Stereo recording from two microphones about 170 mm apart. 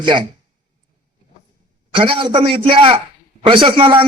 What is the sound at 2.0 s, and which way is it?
A man's voice, 30° right (ahead or behind).